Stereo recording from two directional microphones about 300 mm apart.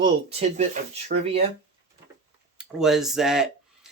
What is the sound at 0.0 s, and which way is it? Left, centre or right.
Speech, right.